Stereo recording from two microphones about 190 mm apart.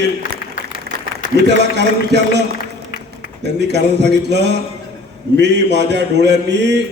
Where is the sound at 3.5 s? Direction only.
65° right (ahead or behind).